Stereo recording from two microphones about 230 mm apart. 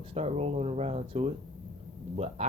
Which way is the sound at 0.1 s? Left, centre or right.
Right.